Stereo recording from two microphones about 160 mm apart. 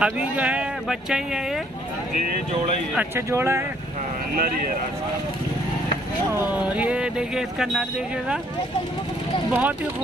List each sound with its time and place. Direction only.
0.0 s speech: 10° right (ahead or behind)
3.2 s speech: 15° right (ahead or behind)
4.4 s speech: 60° right (ahead or behind)
6.3 s speech: 10° right (ahead or behind)
9.5 s speech: 10° right (ahead or behind)